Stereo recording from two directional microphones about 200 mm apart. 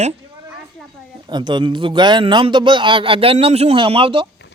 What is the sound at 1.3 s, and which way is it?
A man's voice, 20° right (ahead or behind).